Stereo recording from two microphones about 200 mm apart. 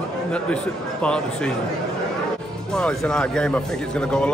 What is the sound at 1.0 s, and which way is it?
Speech, 5° left (ahead or behind).